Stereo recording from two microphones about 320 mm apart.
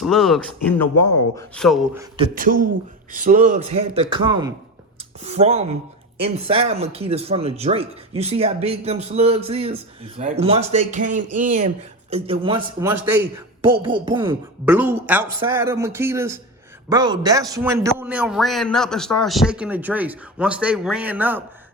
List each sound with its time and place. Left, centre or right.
0.0 s a man's voice: centre
2.1 s a man's voice: right; by 21.4 s centre